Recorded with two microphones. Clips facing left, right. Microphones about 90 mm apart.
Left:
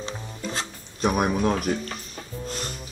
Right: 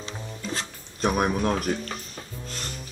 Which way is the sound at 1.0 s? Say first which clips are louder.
Left 1 dB; 5° left (ahead or behind).